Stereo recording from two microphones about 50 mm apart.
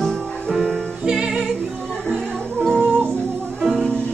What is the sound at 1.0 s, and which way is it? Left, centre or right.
Music, centre.